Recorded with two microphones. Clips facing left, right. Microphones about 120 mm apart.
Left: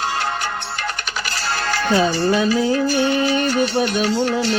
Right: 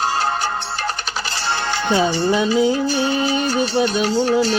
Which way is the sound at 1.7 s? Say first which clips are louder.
Left 1 dB; 20° right (ahead or behind).